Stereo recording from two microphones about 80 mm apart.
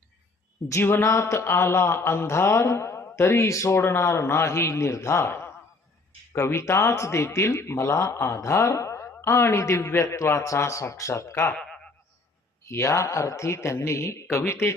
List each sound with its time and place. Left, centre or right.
0.7 s speech: left
11.5 s a sound: centre
12.6 s speech: left